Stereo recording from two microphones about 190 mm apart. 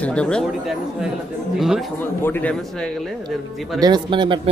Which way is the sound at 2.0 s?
10° left (ahead or behind).